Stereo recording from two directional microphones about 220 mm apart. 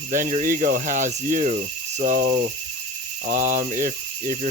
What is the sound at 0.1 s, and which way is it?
Speech, 35° right (ahead or behind).